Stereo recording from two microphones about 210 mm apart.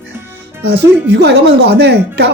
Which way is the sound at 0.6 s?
50° right (ahead or behind).